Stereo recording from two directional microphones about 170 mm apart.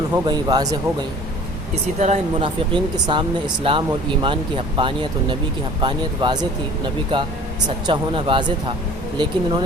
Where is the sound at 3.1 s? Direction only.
30° right (ahead or behind).